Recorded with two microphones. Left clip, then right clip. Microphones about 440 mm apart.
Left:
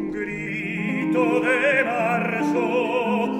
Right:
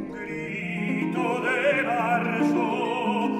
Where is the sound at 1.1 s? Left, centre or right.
Left.